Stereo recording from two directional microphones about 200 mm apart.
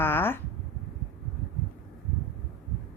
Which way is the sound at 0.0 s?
10° left (ahead or behind).